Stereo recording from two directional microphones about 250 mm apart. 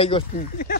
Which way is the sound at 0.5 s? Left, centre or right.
Left.